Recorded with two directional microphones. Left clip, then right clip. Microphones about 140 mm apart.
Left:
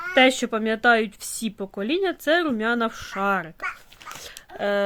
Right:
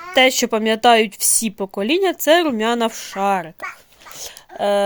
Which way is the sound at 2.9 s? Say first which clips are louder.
Right 5 dB; 5° right (ahead or behind).